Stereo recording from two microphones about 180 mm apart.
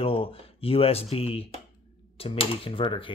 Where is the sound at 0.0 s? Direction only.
30° left (ahead or behind).